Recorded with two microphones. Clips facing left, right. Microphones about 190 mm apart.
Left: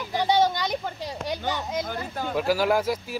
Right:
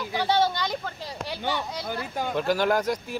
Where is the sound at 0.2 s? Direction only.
15° left (ahead or behind).